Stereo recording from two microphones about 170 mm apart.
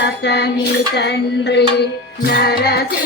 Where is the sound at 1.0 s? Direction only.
85° left.